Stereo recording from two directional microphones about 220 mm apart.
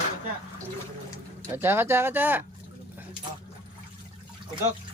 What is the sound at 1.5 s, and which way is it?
Speech, 10° right (ahead or behind).